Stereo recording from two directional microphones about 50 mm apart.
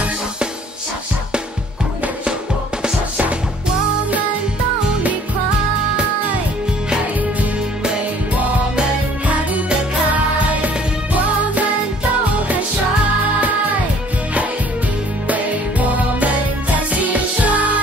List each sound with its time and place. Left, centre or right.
2.8 s music: right
9.3 s music: right
16.7 s music: right